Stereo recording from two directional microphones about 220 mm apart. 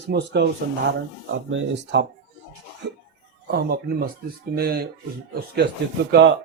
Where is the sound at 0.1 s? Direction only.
45° right (ahead or behind).